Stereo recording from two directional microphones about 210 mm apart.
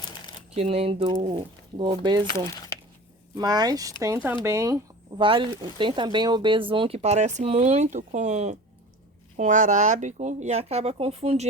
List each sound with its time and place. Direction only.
0.5 s speech: 30° right (ahead or behind)
2.5 s a sound: 15° left (ahead or behind)
3.3 s speech: 20° right (ahead or behind)